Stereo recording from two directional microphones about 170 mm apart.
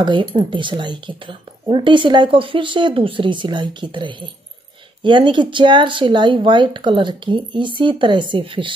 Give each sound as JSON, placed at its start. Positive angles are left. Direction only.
{"t": 0.0, "sound": "speech", "side_deg": -30}